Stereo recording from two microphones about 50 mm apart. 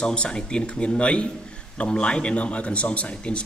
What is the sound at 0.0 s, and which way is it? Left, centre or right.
A man's voice, centre.